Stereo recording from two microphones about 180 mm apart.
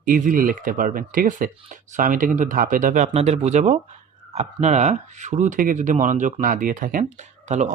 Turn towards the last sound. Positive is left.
turn(degrees=-40)  # may be behind; listen again after turning